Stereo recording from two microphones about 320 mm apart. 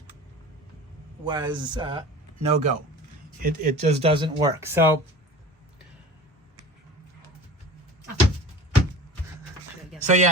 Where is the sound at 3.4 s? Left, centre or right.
Right; by 5.0 s centre.